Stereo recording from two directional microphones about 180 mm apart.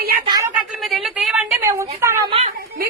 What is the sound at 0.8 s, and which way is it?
Speech, centre (ahead or behind).